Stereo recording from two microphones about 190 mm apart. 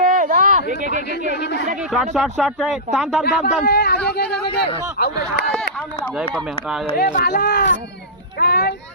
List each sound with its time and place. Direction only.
0.0 s a sound: 45° right (ahead or behind)
1.4 s speech: 65° left (ahead or behind)
1.9 s speech: centre (ahead or behind)
3.2 s a man's voice: 60° left (ahead or behind)
6.3 s speech: centre (ahead or behind)
6.9 s speech: 50° left (ahead or behind)